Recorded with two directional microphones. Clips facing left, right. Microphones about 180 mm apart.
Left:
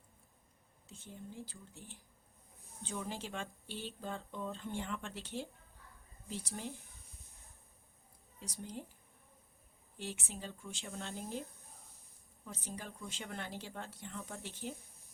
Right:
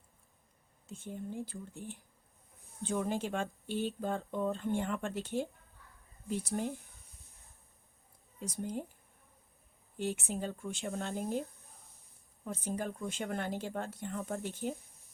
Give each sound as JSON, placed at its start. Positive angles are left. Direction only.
{"t": 0.9, "sound": "a woman's voice", "side_deg": -55}
{"t": 8.4, "sound": "speech", "side_deg": -50}
{"t": 10.0, "sound": "a woman's voice", "side_deg": -55}
{"t": 12.5, "sound": "speech", "side_deg": -50}